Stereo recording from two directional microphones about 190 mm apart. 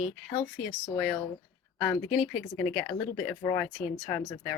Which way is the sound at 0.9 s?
5° left (ahead or behind).